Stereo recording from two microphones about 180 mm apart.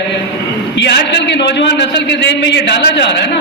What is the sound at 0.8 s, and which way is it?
A man's voice, 70° left (ahead or behind).